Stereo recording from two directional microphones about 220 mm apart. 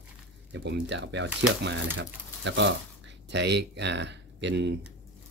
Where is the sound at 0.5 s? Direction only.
50° right (ahead or behind).